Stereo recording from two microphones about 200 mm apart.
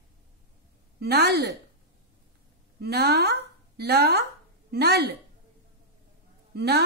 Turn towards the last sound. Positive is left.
turn(degrees=-55)  # may be behind; listen again after turning